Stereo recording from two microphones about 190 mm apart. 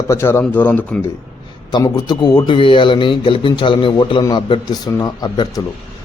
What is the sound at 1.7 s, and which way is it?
A man's voice, 20° left (ahead or behind).